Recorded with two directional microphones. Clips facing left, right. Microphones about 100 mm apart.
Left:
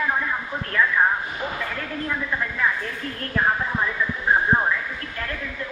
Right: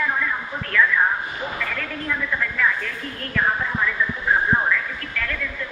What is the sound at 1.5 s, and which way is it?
Speech, 25° left (ahead or behind).